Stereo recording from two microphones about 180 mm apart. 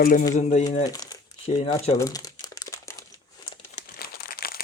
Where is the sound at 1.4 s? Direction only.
35° left (ahead or behind).